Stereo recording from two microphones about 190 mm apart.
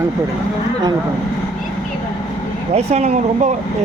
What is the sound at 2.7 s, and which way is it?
Speech, 35° right (ahead or behind).